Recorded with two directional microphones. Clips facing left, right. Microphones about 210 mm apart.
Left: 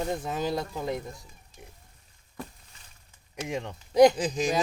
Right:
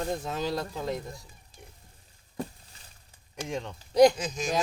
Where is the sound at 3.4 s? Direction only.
10° left (ahead or behind).